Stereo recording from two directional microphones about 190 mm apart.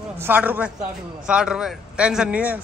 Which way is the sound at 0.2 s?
10° right (ahead or behind).